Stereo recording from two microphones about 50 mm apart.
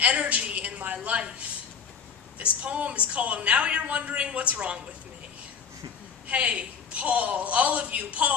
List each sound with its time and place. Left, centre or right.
0.0 s a sound: right
2.3 s a woman's voice: right
6.2 s a woman's voice: right